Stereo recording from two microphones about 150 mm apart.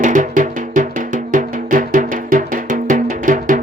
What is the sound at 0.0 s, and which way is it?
Music, 60° right (ahead or behind).